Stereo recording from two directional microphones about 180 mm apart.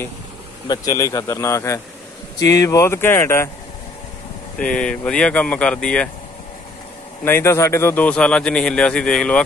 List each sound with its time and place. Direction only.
0.7 s speech: 20° left (ahead or behind)
4.6 s speech: 5° left (ahead or behind)
7.2 s speech: 15° left (ahead or behind)